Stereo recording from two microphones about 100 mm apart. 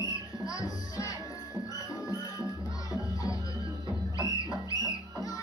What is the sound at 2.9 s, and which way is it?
Music, 35° left (ahead or behind).